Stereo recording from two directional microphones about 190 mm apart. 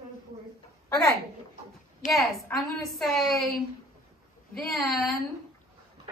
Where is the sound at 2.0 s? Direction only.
40° left (ahead or behind).